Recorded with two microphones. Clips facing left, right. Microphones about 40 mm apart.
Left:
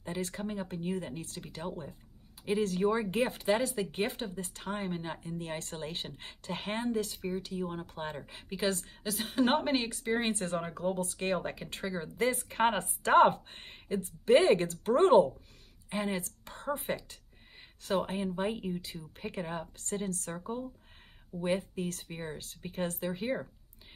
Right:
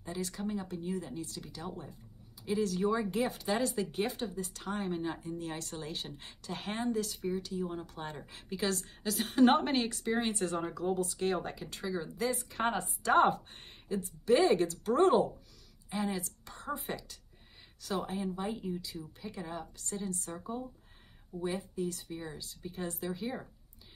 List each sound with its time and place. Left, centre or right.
0.0 s a woman's voice: left; by 10.1 s centre
10.3 s a woman's voice: left
20.3 s speech: left